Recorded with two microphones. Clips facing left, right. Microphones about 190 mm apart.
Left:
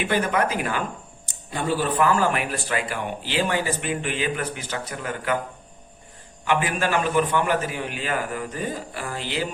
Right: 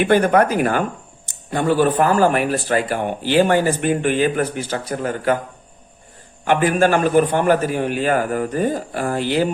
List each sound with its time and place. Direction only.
0.0 s speech: 50° right (ahead or behind)
2.0 s speech: 40° right (ahead or behind)
6.4 s speech: 50° right (ahead or behind)